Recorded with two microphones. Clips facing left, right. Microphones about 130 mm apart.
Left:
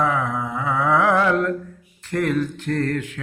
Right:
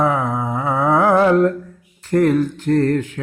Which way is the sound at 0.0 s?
35° right (ahead or behind).